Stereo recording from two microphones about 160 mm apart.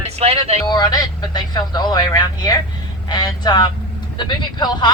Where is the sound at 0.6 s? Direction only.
25° left (ahead or behind).